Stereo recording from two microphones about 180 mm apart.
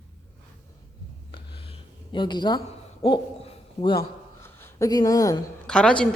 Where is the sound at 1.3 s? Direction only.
30° left (ahead or behind).